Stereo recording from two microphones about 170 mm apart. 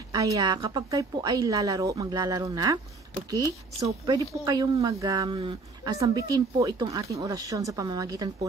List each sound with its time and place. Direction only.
0.1 s a woman's voice: 20° right (ahead or behind)